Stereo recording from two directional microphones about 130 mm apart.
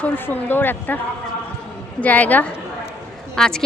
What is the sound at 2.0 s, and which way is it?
A woman's voice, 10° left (ahead or behind).